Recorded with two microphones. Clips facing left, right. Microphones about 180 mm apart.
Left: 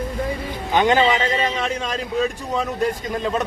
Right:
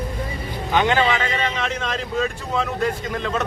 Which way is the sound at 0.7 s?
15° left (ahead or behind).